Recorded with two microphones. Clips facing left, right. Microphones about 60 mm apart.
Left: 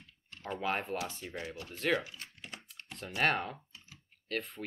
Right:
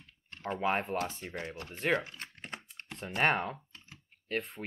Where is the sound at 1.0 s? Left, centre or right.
Right.